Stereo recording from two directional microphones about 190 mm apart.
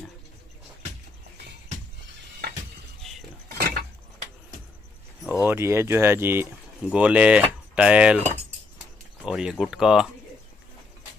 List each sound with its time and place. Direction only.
3.4 s a sound: 55° right (ahead or behind)
5.4 s speech: 10° right (ahead or behind)
9.2 s speech: 5° right (ahead or behind)